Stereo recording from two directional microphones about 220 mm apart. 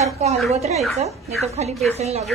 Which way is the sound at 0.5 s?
30° right (ahead or behind).